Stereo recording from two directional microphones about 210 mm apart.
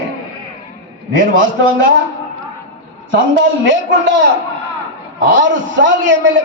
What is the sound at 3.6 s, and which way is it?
Speech, 60° right (ahead or behind).